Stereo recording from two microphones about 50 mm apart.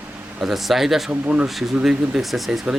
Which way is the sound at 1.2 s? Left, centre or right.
Right.